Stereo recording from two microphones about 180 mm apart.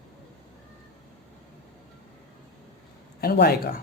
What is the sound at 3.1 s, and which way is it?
Speech, 60° left (ahead or behind).